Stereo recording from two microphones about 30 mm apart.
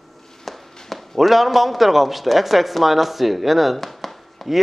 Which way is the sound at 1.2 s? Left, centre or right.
Centre.